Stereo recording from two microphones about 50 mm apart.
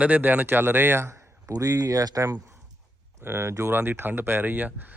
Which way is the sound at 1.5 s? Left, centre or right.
Right.